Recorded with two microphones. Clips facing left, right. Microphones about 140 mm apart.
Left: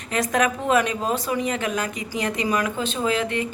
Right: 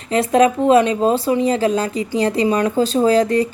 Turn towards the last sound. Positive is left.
turn(degrees=-35)  # may be behind; listen again after turning